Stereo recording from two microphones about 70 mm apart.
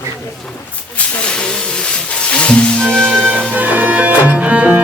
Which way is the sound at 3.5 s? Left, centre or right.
Right.